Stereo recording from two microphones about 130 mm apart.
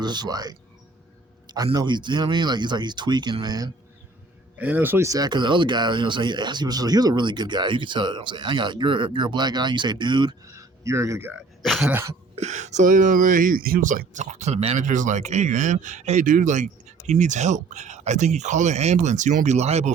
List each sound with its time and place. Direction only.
0.0 s speech: 35° right (ahead or behind)
4.5 s speech: 15° right (ahead or behind); by 10.3 s 35° right (ahead or behind)
10.5 s a man's voice: 20° right (ahead or behind)
11.6 s throat clearing: centre (ahead or behind)
11.9 s throat clearing: 15° right (ahead or behind)
12.4 s speech: 65° right (ahead or behind)